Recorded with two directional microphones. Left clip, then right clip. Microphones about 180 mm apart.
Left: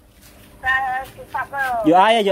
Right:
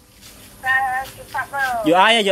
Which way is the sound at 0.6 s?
55° left (ahead or behind).